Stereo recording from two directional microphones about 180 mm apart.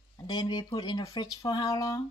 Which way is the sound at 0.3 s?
25° left (ahead or behind).